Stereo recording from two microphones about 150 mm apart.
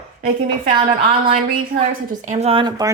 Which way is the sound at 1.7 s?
60° right (ahead or behind).